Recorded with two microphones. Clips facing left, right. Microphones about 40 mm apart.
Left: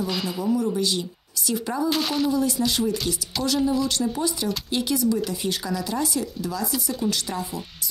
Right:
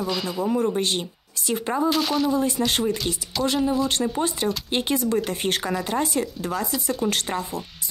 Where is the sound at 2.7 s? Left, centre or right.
Right.